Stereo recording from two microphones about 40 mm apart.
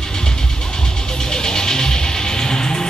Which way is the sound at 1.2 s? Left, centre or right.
Centre.